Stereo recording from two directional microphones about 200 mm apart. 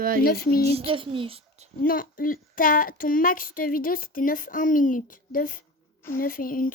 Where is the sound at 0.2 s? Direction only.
45° left (ahead or behind).